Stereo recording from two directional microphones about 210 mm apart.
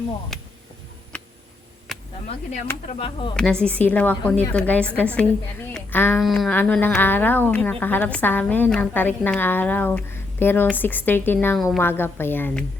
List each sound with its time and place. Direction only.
0.3 s speech: centre (ahead or behind)
1.9 s a sound: centre (ahead or behind)
2.8 s speech: 30° left (ahead or behind)
3.3 s speech: 5° left (ahead or behind)